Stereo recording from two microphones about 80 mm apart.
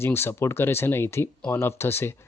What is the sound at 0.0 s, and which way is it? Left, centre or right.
Speech, left.